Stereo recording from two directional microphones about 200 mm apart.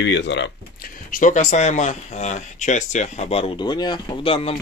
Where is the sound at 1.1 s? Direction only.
40° left (ahead or behind).